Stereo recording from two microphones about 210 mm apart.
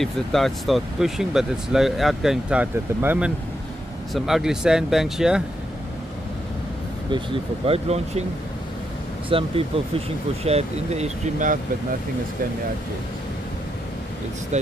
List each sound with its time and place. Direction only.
0.0 s speech: centre (ahead or behind)
7.1 s speech: 25° right (ahead or behind)
9.3 s speech: 25° right (ahead or behind)
14.5 s speech: 35° right (ahead or behind)